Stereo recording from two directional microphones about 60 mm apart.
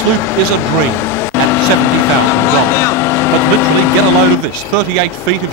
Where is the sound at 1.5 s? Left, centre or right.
Left.